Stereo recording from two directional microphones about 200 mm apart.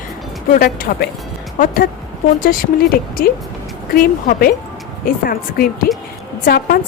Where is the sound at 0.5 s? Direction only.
45° left (ahead or behind).